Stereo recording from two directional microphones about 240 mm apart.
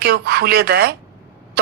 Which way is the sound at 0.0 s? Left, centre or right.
Right.